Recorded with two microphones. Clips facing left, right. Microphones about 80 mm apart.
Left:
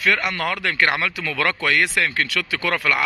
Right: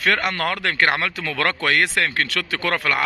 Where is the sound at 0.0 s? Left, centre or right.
Right.